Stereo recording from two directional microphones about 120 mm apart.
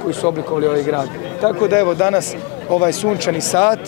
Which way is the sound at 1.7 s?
15° left (ahead or behind).